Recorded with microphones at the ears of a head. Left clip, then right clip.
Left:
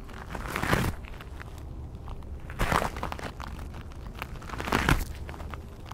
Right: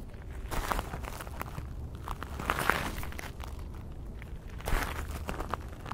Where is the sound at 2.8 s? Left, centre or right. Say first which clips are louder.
Left 6 dB; left.